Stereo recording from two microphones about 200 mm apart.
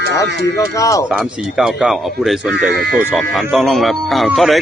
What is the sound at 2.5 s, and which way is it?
Speech, 55° right (ahead or behind).